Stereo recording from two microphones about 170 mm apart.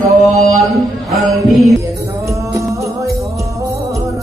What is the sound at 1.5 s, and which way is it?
Speech, centre (ahead or behind).